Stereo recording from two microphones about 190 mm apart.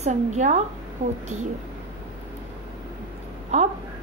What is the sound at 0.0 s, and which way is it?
A woman's voice, 35° right (ahead or behind).